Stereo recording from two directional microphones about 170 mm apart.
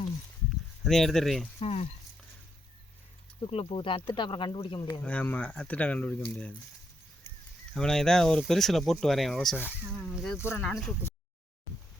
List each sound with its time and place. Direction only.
0.9 s speech: centre (ahead or behind)
1.5 s speech: 35° left (ahead or behind)
3.5 s speech: 30° left (ahead or behind)
4.7 s speech: 20° left (ahead or behind)
5.0 s speech: 10° left (ahead or behind)
7.7 s speech: 5° left (ahead or behind)